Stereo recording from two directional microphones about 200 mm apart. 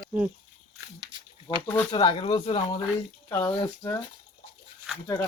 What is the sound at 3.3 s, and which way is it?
Speech, 10° left (ahead or behind).